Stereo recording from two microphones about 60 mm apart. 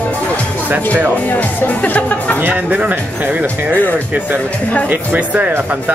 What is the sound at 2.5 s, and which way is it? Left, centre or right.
Speech, right.